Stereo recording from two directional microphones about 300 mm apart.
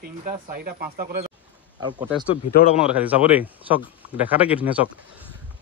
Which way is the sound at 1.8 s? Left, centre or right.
Centre.